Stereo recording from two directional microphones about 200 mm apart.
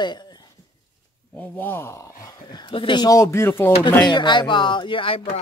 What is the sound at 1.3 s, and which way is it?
Speech, 10° left (ahead or behind).